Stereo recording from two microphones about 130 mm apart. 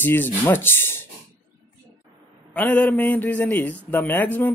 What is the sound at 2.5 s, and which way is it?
Speech, 10° left (ahead or behind).